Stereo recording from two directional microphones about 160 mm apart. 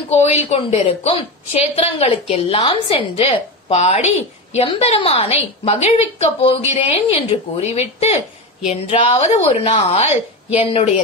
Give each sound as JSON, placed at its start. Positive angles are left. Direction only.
{"t": 0.1, "sound": "a woman's voice", "side_deg": 40}